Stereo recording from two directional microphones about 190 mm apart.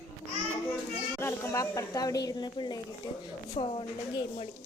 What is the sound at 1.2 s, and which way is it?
Speech, 15° left (ahead or behind).